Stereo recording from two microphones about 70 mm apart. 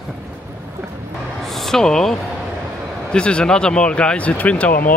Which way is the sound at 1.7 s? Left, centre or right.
Centre.